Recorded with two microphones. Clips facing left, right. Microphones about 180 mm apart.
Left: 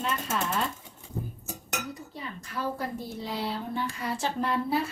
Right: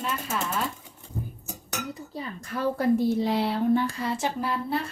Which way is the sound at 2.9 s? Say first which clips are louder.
Right 11 dB; 80° right.